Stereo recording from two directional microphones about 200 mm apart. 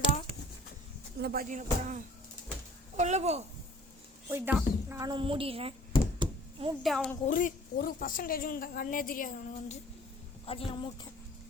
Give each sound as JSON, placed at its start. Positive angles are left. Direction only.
{"t": 1.2, "sound": "speech", "side_deg": -50}
{"t": 4.3, "sound": "a woman's voice", "side_deg": -10}
{"t": 6.1, "sound": "knock", "side_deg": -25}
{"t": 6.8, "sound": "a woman's voice", "side_deg": 0}
{"t": 7.3, "sound": "speech", "side_deg": 40}
{"t": 10.4, "sound": "a woman's voice", "side_deg": 30}